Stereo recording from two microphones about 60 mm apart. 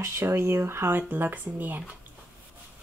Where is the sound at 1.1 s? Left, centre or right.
Right.